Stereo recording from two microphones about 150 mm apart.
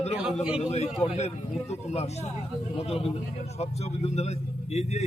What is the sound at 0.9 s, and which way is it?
Speech, 5° right (ahead or behind).